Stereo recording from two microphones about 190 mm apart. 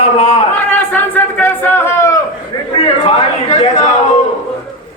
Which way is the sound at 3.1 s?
35° left (ahead or behind).